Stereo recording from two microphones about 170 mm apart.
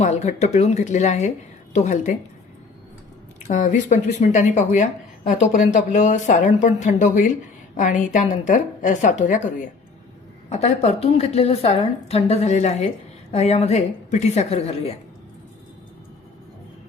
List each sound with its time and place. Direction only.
0.0 s speech: 40° left (ahead or behind)
3.4 s speech: 45° left (ahead or behind)
10.5 s a woman's voice: 40° left (ahead or behind)